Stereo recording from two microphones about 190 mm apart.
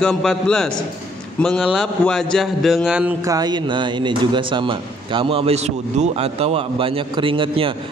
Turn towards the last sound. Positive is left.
turn(degrees=-25)  # may be behind; listen again after turning